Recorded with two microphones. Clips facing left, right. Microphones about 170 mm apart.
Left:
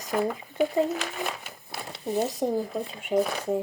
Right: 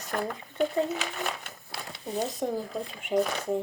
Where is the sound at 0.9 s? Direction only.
Centre (ahead or behind).